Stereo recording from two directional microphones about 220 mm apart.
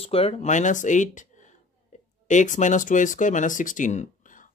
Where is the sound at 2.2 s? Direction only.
35° left (ahead or behind).